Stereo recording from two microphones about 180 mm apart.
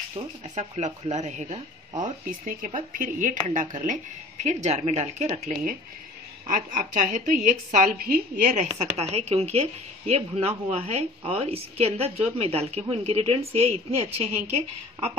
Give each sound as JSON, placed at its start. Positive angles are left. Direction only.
{"t": 0.1, "sound": "a woman's voice", "side_deg": -40}
{"t": 8.7, "sound": "speech", "side_deg": -35}